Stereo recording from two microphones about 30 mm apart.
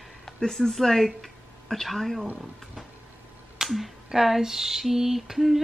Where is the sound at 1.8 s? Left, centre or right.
Centre.